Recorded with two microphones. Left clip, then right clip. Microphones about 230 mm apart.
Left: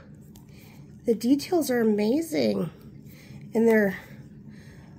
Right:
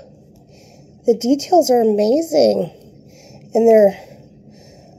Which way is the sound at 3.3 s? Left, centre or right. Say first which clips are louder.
Right 10 dB; centre.